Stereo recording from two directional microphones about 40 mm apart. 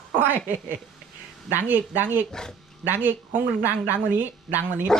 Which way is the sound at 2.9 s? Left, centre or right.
Right.